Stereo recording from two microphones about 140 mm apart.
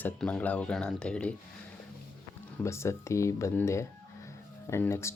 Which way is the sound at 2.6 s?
20° left (ahead or behind).